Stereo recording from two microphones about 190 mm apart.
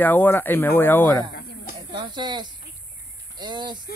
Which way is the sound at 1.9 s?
20° right (ahead or behind).